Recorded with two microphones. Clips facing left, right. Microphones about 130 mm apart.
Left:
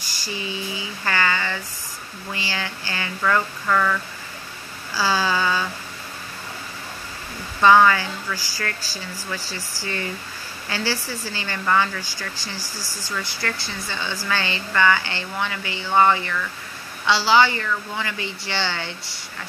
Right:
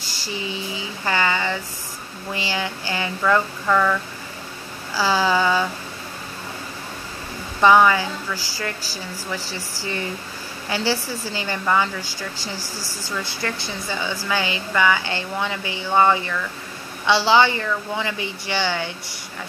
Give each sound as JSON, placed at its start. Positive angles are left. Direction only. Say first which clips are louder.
{"t": 0.2, "sound": "a sound", "louder": "right 1 dB", "side_deg": -20}
{"t": 2.3, "sound": "speech", "louder": "right 4 dB", "side_deg": -20}
{"t": 3.6, "sound": "speech", "louder": "right 2 dB", "side_deg": -10}
{"t": 4.9, "sound": "speech", "louder": "right 3 dB", "side_deg": -20}
{"t": 7.6, "sound": "speech", "louder": "even", "side_deg": -15}
{"t": 10.7, "sound": "speech", "louder": "right 3 dB", "side_deg": -20}
{"t": 13.2, "sound": "speech", "louder": "right 2 dB", "side_deg": -25}